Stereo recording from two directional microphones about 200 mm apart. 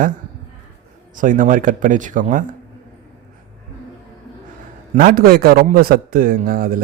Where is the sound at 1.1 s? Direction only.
40° right (ahead or behind).